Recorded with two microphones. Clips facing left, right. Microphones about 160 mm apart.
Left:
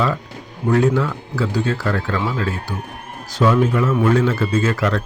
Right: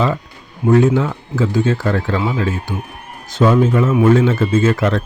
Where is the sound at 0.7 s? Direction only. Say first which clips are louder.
Right 4 dB; 20° right (ahead or behind).